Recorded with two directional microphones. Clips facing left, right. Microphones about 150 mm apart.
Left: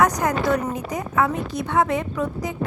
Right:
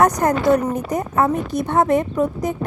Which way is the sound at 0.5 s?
45° right (ahead or behind).